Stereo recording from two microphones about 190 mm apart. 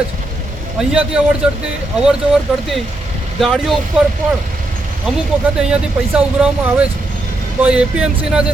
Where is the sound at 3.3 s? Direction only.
Centre (ahead or behind).